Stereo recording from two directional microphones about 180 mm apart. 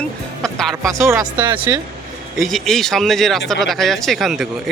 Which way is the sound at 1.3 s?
25° right (ahead or behind).